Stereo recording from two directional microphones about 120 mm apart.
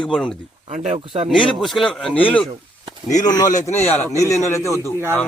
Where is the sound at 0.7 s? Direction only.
75° right (ahead or behind).